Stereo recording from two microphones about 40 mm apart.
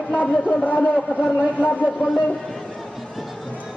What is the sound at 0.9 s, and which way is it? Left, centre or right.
Speech, centre.